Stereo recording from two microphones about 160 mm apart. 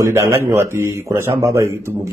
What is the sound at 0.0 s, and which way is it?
A man's voice, 15° right (ahead or behind).